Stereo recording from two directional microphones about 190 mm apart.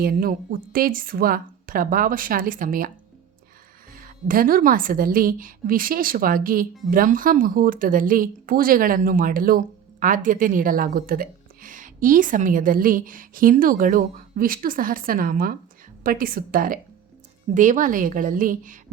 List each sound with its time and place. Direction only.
0.0 s a woman's voice: 50° right (ahead or behind)
3.9 s a woman's voice: 45° right (ahead or behind)